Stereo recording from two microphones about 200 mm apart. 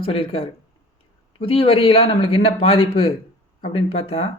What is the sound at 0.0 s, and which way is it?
Speech, 25° left (ahead or behind).